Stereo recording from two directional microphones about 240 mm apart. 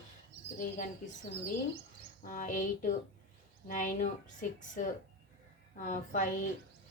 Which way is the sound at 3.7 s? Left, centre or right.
Left.